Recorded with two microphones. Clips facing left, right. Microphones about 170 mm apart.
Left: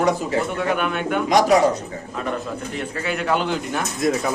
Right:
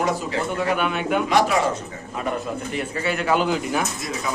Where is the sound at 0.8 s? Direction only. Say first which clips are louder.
Even; 5° right (ahead or behind).